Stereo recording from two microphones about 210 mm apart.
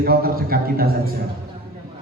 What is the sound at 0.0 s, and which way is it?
A man's voice, 45° right (ahead or behind).